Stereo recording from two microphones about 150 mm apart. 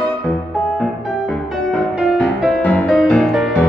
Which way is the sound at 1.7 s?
Centre (ahead or behind).